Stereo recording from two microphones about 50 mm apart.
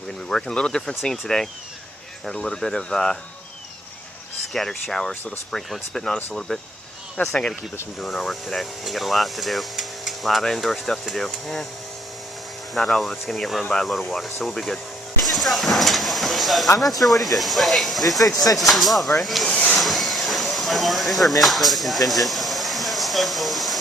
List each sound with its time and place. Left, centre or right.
0.3 s speech: centre
2.2 s speech: centre
4.6 s speech: centre
7.2 s speech: left
8.0 s speech: centre
12.7 s speech: centre
19.8 s a sound: centre